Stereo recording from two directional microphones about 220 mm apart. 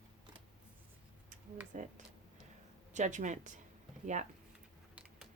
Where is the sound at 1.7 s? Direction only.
35° right (ahead or behind).